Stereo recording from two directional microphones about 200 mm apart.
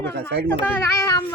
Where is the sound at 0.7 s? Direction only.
15° left (ahead or behind).